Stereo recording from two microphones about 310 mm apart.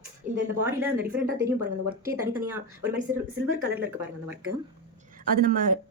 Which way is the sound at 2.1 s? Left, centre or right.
Centre.